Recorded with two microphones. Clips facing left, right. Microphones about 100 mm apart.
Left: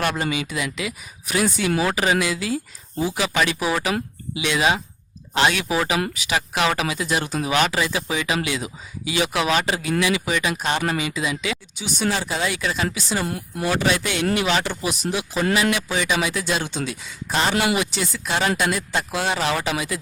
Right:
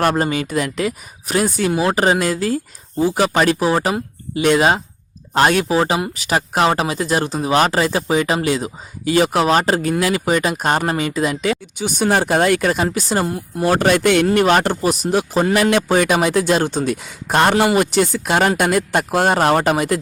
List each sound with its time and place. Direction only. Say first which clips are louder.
0.0 s a man's voice: right 6 dB; 45° right (ahead or behind)
1.7 s speech: right 4 dB; 25° right (ahead or behind)
2.0 s a man's voice: right 5 dB; 45° right (ahead or behind)
13.2 s speech: right 5 dB; 25° right (ahead or behind)
13.7 s a man's voice: right 8 dB; 50° right (ahead or behind)